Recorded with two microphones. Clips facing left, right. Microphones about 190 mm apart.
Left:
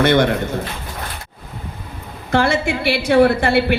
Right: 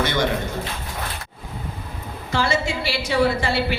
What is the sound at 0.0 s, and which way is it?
Speech, 60° left (ahead or behind).